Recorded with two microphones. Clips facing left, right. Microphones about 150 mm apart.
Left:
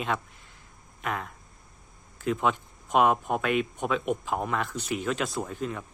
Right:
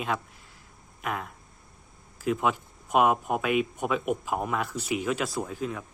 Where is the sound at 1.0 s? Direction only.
5° right (ahead or behind).